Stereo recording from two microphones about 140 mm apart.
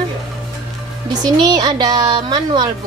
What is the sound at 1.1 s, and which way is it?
A woman's voice, 30° right (ahead or behind).